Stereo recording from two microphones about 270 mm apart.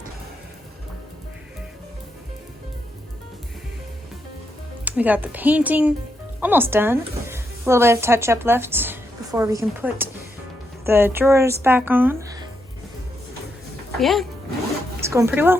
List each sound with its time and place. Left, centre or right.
4.9 s speech: centre
14.0 s speech: centre
15.0 s speech: centre